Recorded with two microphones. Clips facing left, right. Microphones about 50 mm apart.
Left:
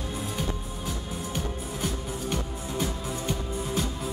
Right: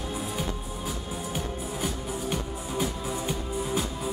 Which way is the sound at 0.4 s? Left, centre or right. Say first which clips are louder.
Even; centre.